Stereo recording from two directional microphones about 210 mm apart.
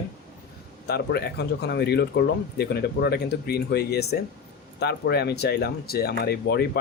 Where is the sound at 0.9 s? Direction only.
50° left (ahead or behind).